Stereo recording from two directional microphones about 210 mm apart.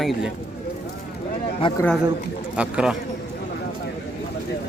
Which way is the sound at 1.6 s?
25° left (ahead or behind).